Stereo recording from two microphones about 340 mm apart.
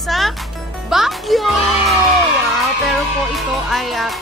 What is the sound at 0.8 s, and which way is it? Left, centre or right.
A child's voice, centre.